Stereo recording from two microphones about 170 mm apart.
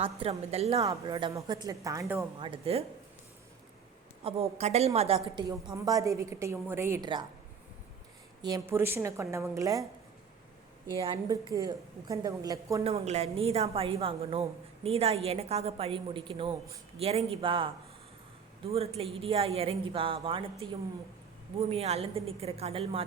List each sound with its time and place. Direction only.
0.0 s speech: 35° right (ahead or behind)
0.9 s a woman's voice: 20° right (ahead or behind)
2.4 s speech: 35° right (ahead or behind)
4.2 s a woman's voice: 35° right (ahead or behind); by 7.1 s 15° right (ahead or behind)
8.4 s a woman's voice: 20° right (ahead or behind)
10.9 s a woman's voice: 25° right (ahead or behind)
12.8 s speech: 40° right (ahead or behind)
18.7 s speech: 35° right (ahead or behind)